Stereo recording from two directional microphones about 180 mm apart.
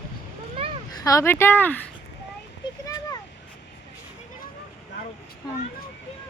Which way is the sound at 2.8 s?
20° left (ahead or behind).